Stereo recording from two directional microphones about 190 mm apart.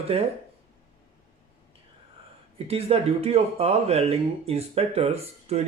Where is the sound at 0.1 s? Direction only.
30° right (ahead or behind).